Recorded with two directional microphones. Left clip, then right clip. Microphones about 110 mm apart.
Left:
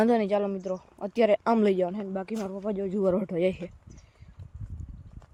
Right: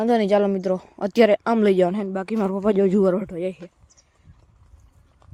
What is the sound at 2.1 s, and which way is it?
Speech, 55° right (ahead or behind).